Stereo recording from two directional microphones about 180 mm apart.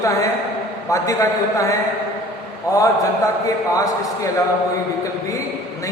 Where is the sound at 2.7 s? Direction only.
20° left (ahead or behind).